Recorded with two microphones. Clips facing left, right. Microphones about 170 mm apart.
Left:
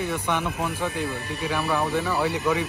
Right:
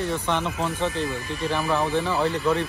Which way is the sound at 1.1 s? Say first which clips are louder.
Right 1 dB; 65° left (ahead or behind).